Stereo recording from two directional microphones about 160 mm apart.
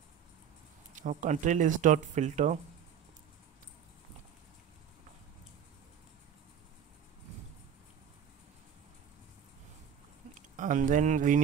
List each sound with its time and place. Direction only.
0.9 s speech: 50° right (ahead or behind)
10.5 s speech: 55° right (ahead or behind)